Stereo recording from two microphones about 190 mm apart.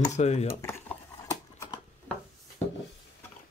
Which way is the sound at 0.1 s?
35° left (ahead or behind).